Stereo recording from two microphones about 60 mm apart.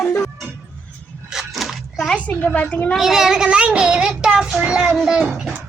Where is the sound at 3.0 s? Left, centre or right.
Centre.